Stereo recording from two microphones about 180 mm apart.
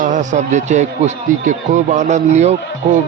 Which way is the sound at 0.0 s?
45° right (ahead or behind).